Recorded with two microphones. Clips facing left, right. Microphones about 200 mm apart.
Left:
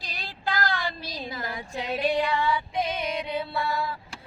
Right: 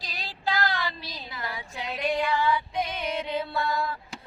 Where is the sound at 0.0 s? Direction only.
50° left (ahead or behind).